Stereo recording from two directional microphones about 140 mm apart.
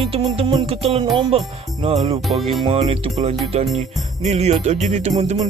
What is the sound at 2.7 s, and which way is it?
Music, 45° right (ahead or behind).